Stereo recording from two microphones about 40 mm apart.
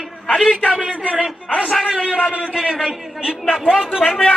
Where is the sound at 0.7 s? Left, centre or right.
Right.